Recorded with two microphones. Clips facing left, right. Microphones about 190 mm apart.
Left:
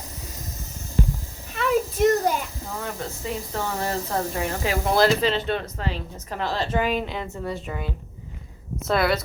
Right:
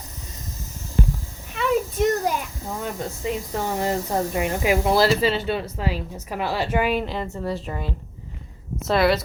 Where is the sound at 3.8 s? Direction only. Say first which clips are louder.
Right 4 dB; 15° right (ahead or behind).